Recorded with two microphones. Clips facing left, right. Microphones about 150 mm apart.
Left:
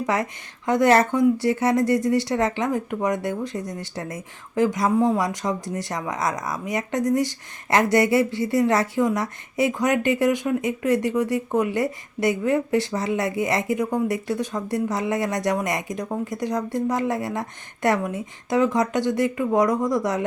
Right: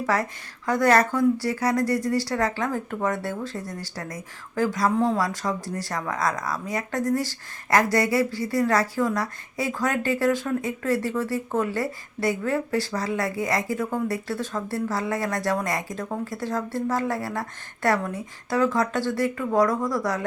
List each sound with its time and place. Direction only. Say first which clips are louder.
0.0 s speech: left 1 dB; 20° left (ahead or behind)